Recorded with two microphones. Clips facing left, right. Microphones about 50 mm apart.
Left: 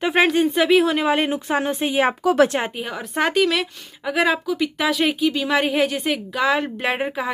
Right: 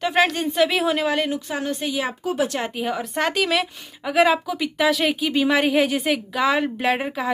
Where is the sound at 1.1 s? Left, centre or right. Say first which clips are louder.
Left 4 dB; left.